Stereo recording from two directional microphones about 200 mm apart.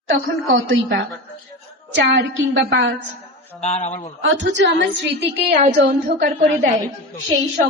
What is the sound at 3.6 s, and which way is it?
Speech, 30° left (ahead or behind).